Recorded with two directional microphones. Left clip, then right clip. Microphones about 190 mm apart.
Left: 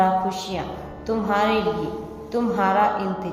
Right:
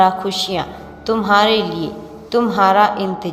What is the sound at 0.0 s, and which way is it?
A woman's voice, 15° right (ahead or behind).